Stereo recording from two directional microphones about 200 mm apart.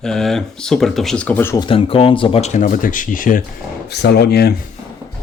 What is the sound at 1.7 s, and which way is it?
Speech, 25° left (ahead or behind).